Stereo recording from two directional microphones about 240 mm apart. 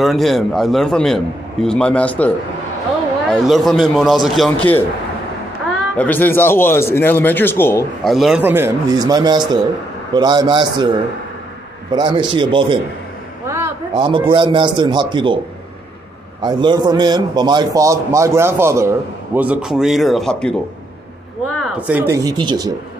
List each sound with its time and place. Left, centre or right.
0.0 s a man's voice: centre
5.9 s a man's voice: centre
11.9 s a man's voice: centre
16.4 s a man's voice: centre
21.5 s a man's voice: centre